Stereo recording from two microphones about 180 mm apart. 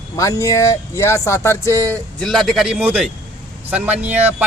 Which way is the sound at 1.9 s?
Centre (ahead or behind).